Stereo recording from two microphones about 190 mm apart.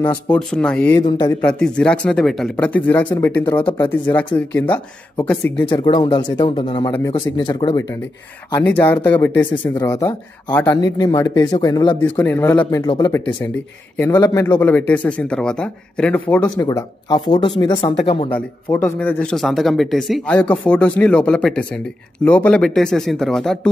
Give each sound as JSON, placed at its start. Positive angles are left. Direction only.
{"t": 0.3, "sound": "speech", "side_deg": 5}
{"t": 0.9, "sound": "speech", "side_deg": 25}
{"t": 1.4, "sound": "speech", "side_deg": 5}
{"t": 5.1, "sound": "speech", "side_deg": 10}
{"t": 5.7, "sound": "speech", "side_deg": 25}
{"t": 8.6, "sound": "speech", "side_deg": 10}
{"t": 10.8, "sound": "speech", "side_deg": 20}
{"t": 12.0, "sound": "speech", "side_deg": 10}
{"t": 12.8, "sound": "speech", "side_deg": 20}
{"t": 16.4, "sound": "speech", "side_deg": 20}
{"t": 18.7, "sound": "speech", "side_deg": 10}